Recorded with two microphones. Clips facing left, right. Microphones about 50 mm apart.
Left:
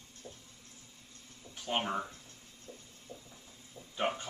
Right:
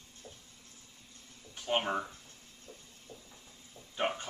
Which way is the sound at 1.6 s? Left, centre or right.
Centre.